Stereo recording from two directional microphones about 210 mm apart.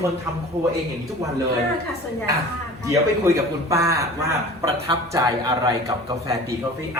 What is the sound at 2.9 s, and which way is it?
A man's voice, 15° right (ahead or behind).